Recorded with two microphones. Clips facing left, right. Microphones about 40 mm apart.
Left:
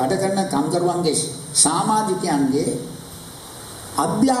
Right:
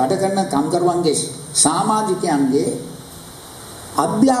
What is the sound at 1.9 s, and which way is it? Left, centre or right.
Speech, right.